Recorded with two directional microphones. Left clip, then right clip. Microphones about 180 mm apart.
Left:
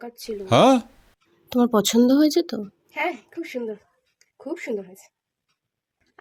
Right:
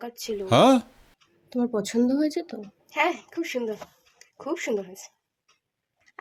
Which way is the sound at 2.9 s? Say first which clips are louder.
Right 2 dB; 15° left (ahead or behind).